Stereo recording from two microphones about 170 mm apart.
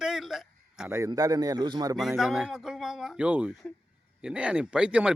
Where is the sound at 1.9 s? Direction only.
Centre (ahead or behind).